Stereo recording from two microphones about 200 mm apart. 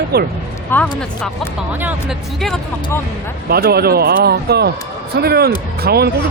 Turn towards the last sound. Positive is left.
turn(degrees=-50)  # may be behind; listen again after turning